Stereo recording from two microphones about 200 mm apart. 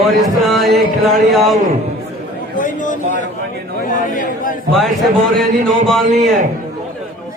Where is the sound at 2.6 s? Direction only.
40° left (ahead or behind).